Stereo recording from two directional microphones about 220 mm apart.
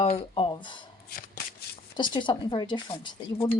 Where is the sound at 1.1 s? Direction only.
45° left (ahead or behind).